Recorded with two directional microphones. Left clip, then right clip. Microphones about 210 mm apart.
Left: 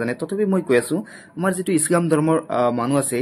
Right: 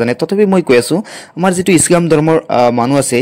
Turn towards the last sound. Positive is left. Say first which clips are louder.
# right 9 dB
turn(degrees=-40)  # may be behind; listen again after turning